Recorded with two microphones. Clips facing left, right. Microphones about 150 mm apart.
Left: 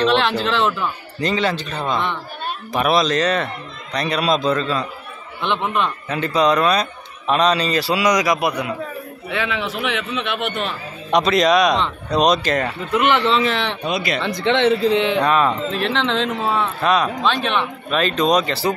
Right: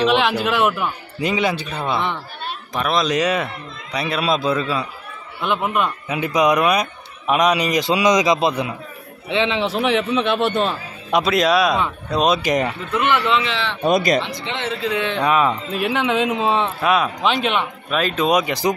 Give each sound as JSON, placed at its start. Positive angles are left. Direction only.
{"t": 0.0, "sound": "speech", "side_deg": -10}
{"t": 2.7, "sound": "speech", "side_deg": 10}
{"t": 3.1, "sound": "a man's voice", "side_deg": -10}
{"t": 11.1, "sound": "a man's voice", "side_deg": -5}
{"t": 12.4, "sound": "speech", "side_deg": -15}
{"t": 12.9, "sound": "speech", "side_deg": 20}
{"t": 13.3, "sound": "speech", "side_deg": 40}
{"t": 13.8, "sound": "speech", "side_deg": -45}
{"t": 14.5, "sound": "speech", "side_deg": 70}
{"t": 15.0, "sound": "speech", "side_deg": 15}
{"t": 15.2, "sound": "speech", "side_deg": -10}
{"t": 16.8, "sound": "speech", "side_deg": -5}